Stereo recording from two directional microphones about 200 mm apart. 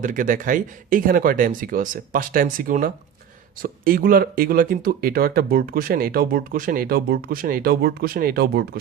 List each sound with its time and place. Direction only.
0.0 s speech: 40° right (ahead or behind)